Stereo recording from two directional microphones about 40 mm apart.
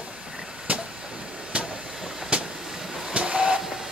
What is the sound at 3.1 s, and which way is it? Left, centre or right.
Vehicle, right.